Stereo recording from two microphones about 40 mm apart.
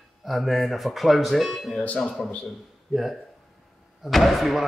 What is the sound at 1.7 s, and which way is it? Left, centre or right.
Speech, left.